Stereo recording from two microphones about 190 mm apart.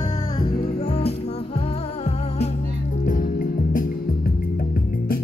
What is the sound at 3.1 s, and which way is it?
Music, 45° left (ahead or behind).